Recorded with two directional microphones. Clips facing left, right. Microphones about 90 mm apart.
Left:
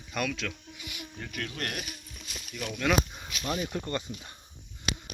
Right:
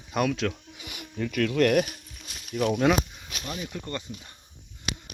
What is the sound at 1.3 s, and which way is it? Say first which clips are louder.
Speech: right 15 dB; 75° right (ahead or behind).